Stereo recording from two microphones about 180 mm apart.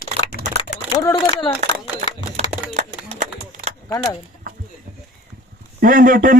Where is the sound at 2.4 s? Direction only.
35° right (ahead or behind).